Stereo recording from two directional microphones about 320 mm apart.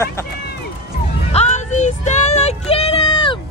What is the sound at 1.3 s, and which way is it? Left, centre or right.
Music, left.